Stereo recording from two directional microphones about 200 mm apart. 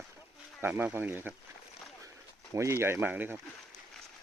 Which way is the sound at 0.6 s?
10° right (ahead or behind).